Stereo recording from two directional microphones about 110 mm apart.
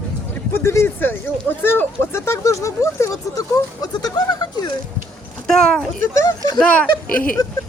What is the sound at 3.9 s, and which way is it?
Speech, 35° left (ahead or behind).